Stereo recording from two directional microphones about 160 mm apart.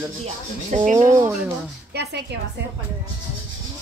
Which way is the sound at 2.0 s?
90° right.